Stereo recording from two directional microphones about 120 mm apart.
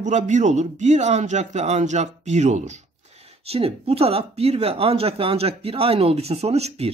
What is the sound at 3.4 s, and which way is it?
Speech, 55° right (ahead or behind).